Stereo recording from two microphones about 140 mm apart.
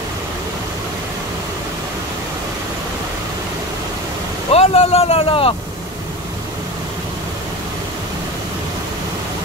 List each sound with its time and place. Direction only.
4.5 s speech: 45° left (ahead or behind)